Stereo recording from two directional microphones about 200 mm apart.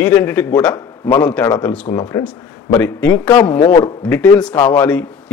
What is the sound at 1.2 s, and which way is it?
A man's voice, 5° left (ahead or behind).